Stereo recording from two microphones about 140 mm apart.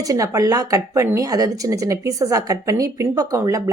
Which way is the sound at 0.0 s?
25° right (ahead or behind).